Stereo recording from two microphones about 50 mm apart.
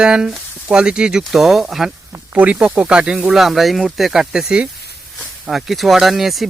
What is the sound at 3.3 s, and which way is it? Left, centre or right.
Speech, centre.